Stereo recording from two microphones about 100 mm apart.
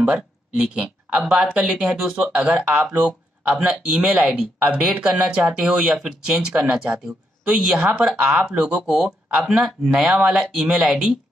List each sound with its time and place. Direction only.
0.0 s speech: 10° right (ahead or behind)